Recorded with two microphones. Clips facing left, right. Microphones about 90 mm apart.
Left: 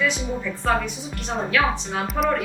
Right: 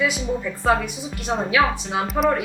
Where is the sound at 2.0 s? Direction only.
Centre (ahead or behind).